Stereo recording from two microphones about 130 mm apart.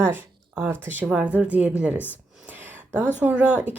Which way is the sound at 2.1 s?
10° right (ahead or behind).